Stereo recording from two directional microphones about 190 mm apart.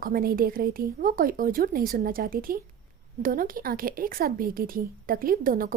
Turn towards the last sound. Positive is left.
turn(degrees=-50)  # may be behind; listen again after turning